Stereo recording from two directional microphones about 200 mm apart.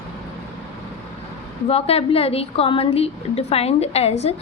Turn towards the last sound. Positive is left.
turn(degrees=30)  # may be behind; listen again after turning